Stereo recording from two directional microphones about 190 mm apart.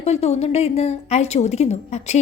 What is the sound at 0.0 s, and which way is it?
A woman's voice, 35° left (ahead or behind).